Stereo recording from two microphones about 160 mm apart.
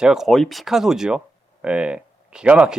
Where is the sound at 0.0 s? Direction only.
5° right (ahead or behind).